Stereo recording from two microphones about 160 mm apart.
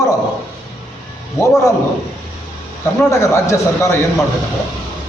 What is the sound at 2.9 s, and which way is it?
A man's voice, 15° left (ahead or behind).